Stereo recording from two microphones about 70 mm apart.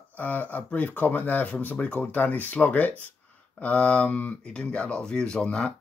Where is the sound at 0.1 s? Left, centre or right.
Left.